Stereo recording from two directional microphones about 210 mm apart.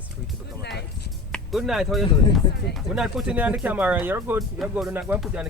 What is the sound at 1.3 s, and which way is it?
Speech, centre (ahead or behind).